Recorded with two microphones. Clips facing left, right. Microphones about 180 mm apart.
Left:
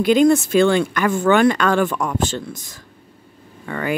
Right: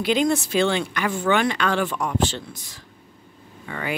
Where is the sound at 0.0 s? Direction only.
50° left (ahead or behind).